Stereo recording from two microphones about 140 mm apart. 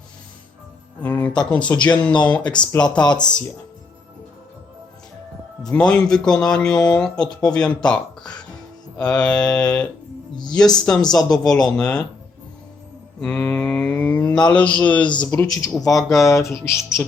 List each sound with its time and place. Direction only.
1.0 s speech: 10° left (ahead or behind)
1.8 s mantra: 10° left (ahead or behind)
3.0 s speech: 30° left (ahead or behind)
5.6 s a man's voice: 5° left (ahead or behind)
9.0 s mantra: 5° left (ahead or behind)
10.5 s a man's voice: 5° left (ahead or behind)
13.1 s mantra: 5° left (ahead or behind)
15.0 s speech: 35° left (ahead or behind)
15.3 s speech: 20° left (ahead or behind)